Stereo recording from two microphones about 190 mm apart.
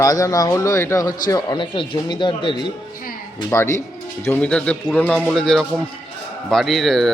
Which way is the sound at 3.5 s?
15° left (ahead or behind).